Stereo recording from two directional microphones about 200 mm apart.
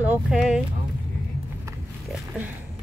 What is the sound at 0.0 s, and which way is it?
Speech, 5° right (ahead or behind).